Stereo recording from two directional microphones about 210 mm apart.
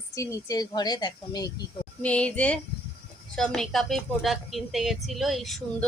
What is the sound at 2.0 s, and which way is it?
A woman's voice, 5° left (ahead or behind).